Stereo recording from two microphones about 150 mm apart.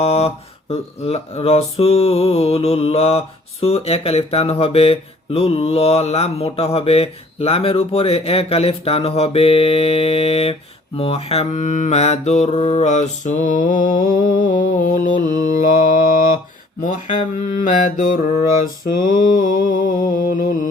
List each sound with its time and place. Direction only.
0.0 s mantra: 40° left (ahead or behind); by 15.5 s 60° left (ahead or behind)
16.8 s mantra: 55° left (ahead or behind)